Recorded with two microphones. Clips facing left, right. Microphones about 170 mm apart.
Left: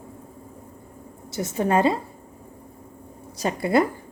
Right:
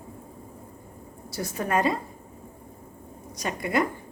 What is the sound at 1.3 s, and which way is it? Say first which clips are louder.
Speech: left 5 dB; 25° left (ahead or behind).